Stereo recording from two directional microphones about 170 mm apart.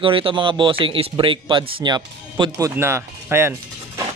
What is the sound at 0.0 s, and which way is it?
Speech, 30° right (ahead or behind).